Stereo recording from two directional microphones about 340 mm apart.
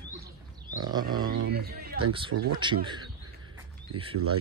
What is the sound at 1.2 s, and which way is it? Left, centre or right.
Speech, right.